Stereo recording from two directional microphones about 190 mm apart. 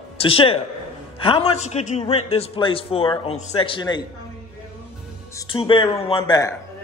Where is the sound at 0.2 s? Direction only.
30° left (ahead or behind).